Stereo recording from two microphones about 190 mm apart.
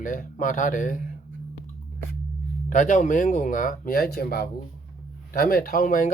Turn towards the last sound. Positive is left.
turn(degrees=45)  # may be behind; listen again after turning